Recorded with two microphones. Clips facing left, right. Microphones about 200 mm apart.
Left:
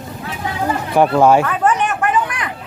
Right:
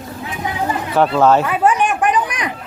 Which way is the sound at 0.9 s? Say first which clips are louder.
Left 1 dB; 15° left (ahead or behind).